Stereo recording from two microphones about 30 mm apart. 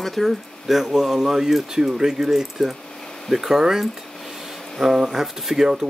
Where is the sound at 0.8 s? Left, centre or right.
Centre.